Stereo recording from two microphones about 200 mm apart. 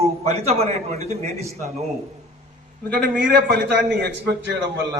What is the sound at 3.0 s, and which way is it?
A man's voice, 50° right (ahead or behind).